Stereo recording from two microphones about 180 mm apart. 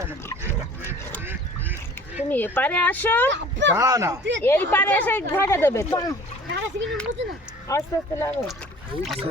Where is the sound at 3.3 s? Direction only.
90° right.